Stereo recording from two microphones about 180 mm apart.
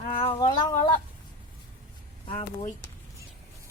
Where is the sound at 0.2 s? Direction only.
25° left (ahead or behind).